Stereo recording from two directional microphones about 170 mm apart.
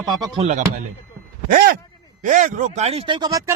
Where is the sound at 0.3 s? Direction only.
40° right (ahead or behind).